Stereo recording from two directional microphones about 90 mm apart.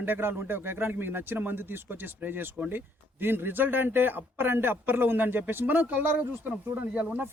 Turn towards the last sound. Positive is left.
turn(degrees=-20)  # may be behind; listen again after turning